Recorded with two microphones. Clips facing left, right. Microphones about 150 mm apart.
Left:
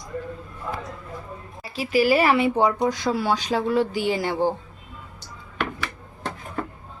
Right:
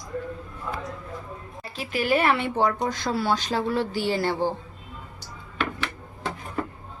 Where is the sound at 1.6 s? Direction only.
5° left (ahead or behind).